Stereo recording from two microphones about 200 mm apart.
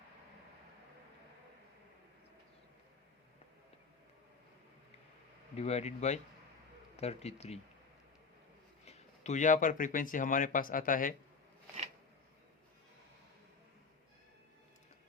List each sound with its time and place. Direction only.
5.5 s speech: 30° left (ahead or behind)
8.8 s speech: 35° left (ahead or behind)